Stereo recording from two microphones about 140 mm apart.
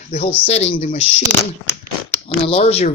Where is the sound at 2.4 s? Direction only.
40° left (ahead or behind).